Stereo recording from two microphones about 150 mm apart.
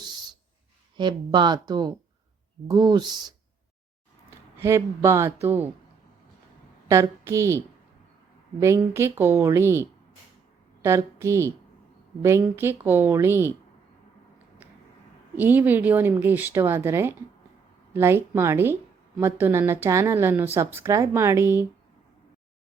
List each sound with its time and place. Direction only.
0.0 s a sound: 30° right (ahead or behind)
0.9 s speech: 30° right (ahead or behind)
4.5 s speech: 20° right (ahead or behind)
6.8 s a woman's voice: 20° right (ahead or behind)
8.6 s speech: 20° right (ahead or behind)
10.8 s speech: 20° right (ahead or behind)
15.4 s speech: 10° right (ahead or behind)